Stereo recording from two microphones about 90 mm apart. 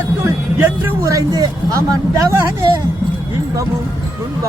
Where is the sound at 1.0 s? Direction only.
40° right (ahead or behind).